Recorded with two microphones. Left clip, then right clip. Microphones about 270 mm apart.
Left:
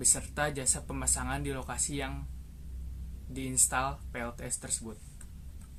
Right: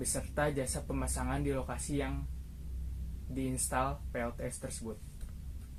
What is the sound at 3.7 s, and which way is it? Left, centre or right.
Speech, left.